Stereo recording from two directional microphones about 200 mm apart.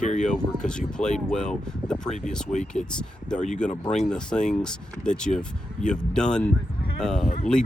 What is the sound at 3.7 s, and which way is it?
Speech, 35° left (ahead or behind).